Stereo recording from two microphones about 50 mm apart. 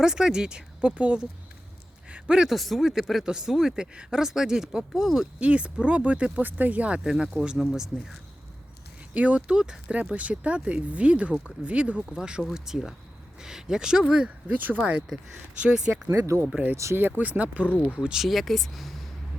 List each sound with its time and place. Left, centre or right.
0.0 s speech: centre
2.0 s a sound: right
2.5 s speech: centre
5.4 s speech: right
7.0 s speech: centre
9.1 s speech: right
14.3 s speech: right
16.0 s speech: right
17.0 s speech: right
17.9 s speech: centre
18.2 s speech: centre